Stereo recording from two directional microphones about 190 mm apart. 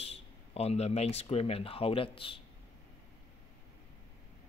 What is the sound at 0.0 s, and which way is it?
Speech, 35° left (ahead or behind).